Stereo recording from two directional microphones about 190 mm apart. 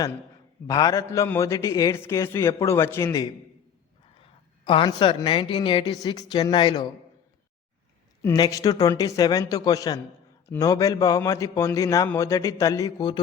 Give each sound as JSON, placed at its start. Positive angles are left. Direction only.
{"t": 0.7, "sound": "a man's voice", "side_deg": 20}
{"t": 4.1, "sound": "a woman's voice", "side_deg": 30}
{"t": 8.2, "sound": "a man's voice", "side_deg": 20}